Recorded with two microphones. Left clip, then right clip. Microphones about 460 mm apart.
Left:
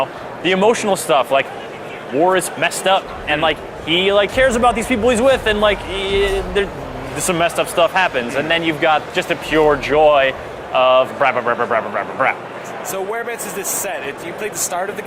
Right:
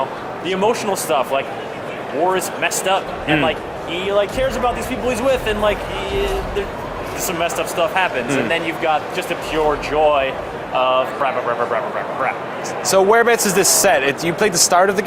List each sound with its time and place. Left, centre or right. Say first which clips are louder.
0.4 s speech: left 4 dB; left
7.3 s speech: left 4 dB; left
12.9 s speech: right 11 dB; right